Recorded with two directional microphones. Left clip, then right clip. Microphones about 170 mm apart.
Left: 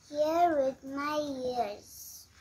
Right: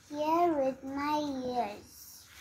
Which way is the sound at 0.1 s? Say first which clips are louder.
Left 2 dB; 55° left (ahead or behind).